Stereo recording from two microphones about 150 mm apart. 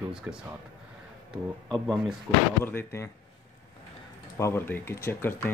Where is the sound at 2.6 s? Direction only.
15° left (ahead or behind).